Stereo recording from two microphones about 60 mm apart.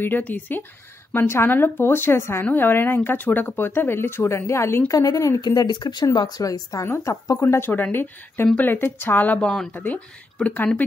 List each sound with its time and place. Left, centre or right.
0.2 s speech: left
4.9 s speech: left
7.1 s speech: left
7.7 s speech: left